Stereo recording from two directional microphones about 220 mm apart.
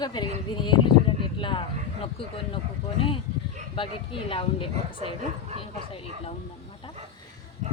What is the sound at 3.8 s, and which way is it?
Speech, 25° left (ahead or behind).